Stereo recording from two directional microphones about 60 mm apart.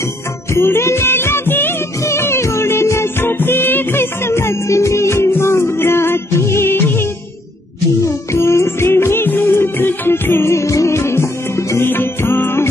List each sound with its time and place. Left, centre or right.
0.5 s music: left
2.0 s music: left
8.0 s music: left